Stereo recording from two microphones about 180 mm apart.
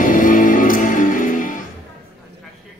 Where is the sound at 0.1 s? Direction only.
45° left (ahead or behind).